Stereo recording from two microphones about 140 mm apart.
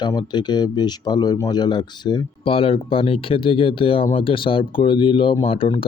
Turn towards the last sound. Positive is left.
turn(degrees=40)  # may be behind; listen again after turning